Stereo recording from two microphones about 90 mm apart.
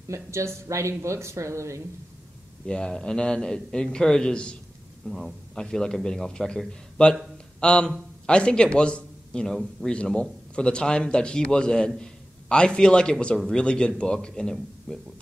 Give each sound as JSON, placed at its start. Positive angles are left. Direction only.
{"t": 0.1, "sound": "speech", "side_deg": -35}
{"t": 2.6, "sound": "a man's voice", "side_deg": 10}